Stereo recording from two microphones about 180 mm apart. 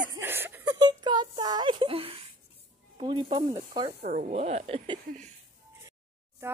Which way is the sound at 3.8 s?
40° right (ahead or behind).